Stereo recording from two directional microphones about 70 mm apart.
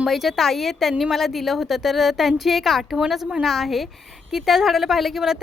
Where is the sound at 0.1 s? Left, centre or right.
Centre.